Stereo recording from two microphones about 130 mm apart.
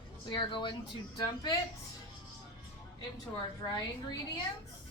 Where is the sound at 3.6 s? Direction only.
30° left (ahead or behind).